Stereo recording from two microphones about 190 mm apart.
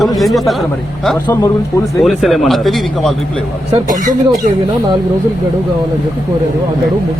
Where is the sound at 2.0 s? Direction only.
Centre (ahead or behind).